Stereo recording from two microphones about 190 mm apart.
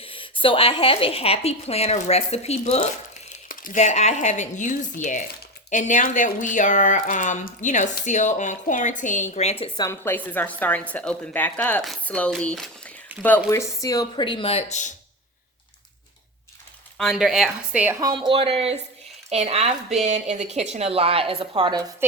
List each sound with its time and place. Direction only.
0.0 s speech: 25° left (ahead or behind)
3.5 s speech: 45° left (ahead or behind)
9.7 s speech: 15° left (ahead or behind)
13.1 s speech: 10° right (ahead or behind)
13.8 s speech: 20° left (ahead or behind); by 14.9 s 40° left (ahead or behind)
17.0 s speech: centre (ahead or behind)
18.0 s speech: 25° right (ahead or behind)